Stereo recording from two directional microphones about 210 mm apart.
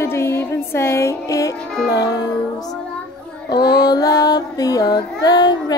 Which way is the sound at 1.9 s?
20° left (ahead or behind).